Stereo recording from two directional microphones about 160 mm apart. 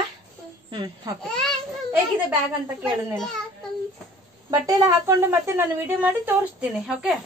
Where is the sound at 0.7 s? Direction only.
25° right (ahead or behind).